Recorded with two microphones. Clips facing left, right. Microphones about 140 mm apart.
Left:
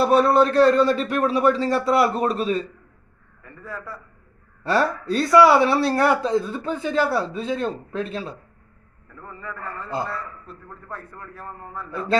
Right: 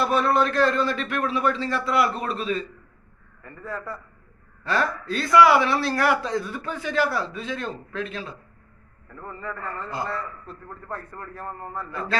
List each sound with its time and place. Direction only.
0.0 s a man's voice: 30° left (ahead or behind)
3.4 s a man's voice: 10° left (ahead or behind)
4.6 s a man's voice: 35° left (ahead or behind)
9.8 s a man's voice: 5° left (ahead or behind)